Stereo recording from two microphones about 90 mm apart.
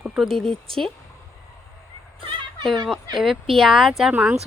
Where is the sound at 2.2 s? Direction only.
75° right (ahead or behind).